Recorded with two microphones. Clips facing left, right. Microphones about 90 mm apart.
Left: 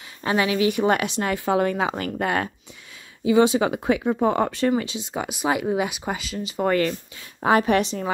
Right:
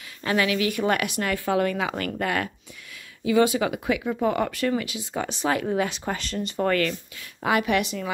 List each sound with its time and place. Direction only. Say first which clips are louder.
0.2 s speech: left 2 dB; 25° left (ahead or behind); by 6.6 s 5° left (ahead or behind)
6.6 s a woman's voice: left 2 dB; 25° left (ahead or behind)